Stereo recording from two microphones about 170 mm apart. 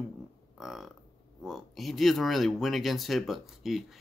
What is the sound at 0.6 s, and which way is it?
Burping, centre (ahead or behind).